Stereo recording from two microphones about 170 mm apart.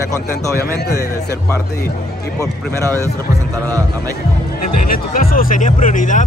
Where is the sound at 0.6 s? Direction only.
70° left (ahead or behind).